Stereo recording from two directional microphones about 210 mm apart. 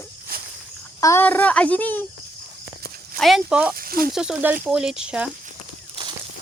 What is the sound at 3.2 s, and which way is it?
Speech, centre (ahead or behind).